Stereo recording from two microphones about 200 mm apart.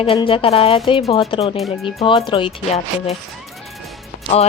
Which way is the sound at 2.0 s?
25° left (ahead or behind).